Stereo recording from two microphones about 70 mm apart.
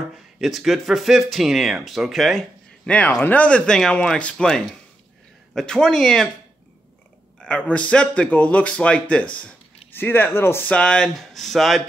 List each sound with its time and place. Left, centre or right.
0.4 s speech: centre
2.9 s speech: centre
7.3 s speech: centre
9.9 s speech: left
10.6 s speech: centre
11.1 s speech: centre